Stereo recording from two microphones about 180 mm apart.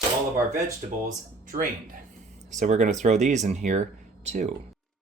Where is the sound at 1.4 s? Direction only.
50° right (ahead or behind).